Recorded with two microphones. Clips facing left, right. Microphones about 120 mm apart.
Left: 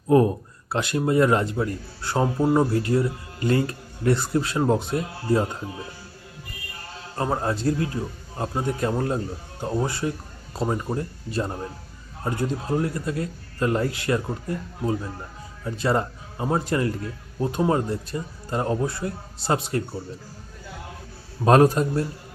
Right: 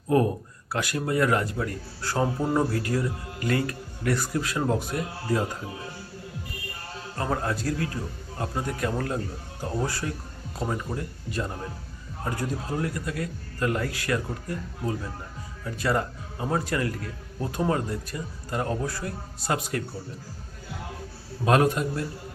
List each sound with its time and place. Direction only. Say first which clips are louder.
0.1 s speech: left 4 dB; 25° left (ahead or behind)
7.2 s speech: left 3 dB; 25° left (ahead or behind)
15.6 s speech: left 3 dB; 25° left (ahead or behind)
21.4 s a man's voice: left 5 dB; 35° left (ahead or behind)